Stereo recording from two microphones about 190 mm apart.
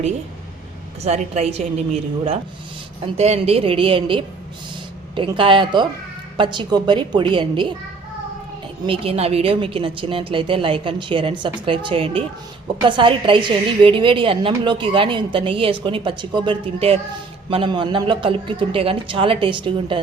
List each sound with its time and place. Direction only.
1.0 s a woman's voice: 35° right (ahead or behind)
8.9 s a woman's voice: 30° right (ahead or behind)